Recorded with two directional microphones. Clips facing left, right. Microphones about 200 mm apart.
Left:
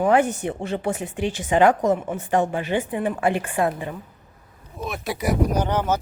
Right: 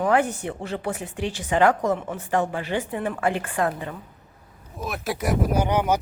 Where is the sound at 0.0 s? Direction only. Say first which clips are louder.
Left 3 dB; 25° left (ahead or behind).